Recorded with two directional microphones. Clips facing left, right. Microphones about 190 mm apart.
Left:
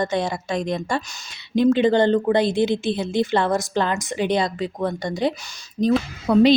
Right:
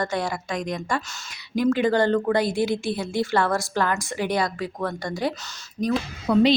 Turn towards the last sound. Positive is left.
turn(degrees=45)  # may be behind; listen again after turning